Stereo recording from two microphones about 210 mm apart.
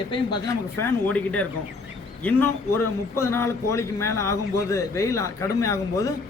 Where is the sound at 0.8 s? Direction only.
10° left (ahead or behind).